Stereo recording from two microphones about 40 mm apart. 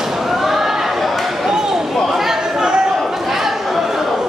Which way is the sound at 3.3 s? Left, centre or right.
Centre.